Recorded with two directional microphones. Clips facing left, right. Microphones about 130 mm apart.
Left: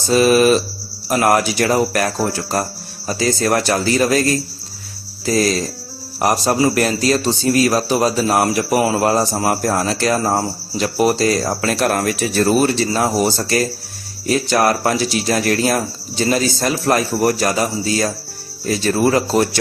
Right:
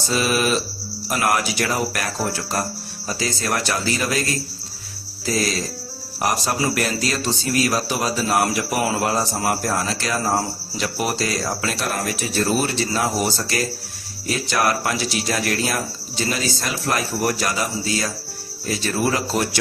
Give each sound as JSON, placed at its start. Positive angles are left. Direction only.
{"t": 0.1, "sound": "speech", "side_deg": 40}
{"t": 3.1, "sound": "speech", "side_deg": 45}
{"t": 5.2, "sound": "cricket", "side_deg": 40}
{"t": 6.2, "sound": "a man's voice", "side_deg": 40}
{"t": 12.6, "sound": "a man's voice", "side_deg": 40}